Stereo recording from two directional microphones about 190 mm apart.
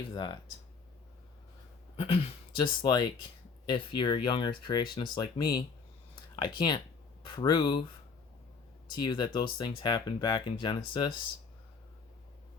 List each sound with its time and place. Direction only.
0.1 s speech: 25° left (ahead or behind)
2.0 s speech: 30° left (ahead or behind)
8.9 s speech: 20° left (ahead or behind)